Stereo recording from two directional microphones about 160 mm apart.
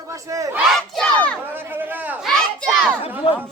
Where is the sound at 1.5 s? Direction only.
10° right (ahead or behind).